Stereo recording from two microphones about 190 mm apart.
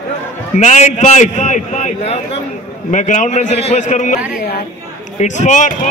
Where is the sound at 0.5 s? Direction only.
40° left (ahead or behind).